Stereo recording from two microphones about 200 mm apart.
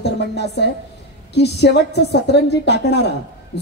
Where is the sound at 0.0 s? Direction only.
55° left (ahead or behind).